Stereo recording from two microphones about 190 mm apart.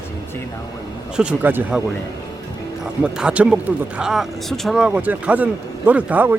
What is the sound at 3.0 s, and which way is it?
Speech, 5° right (ahead or behind).